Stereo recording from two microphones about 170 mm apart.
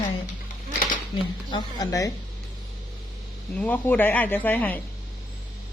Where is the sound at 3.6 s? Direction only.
10° left (ahead or behind).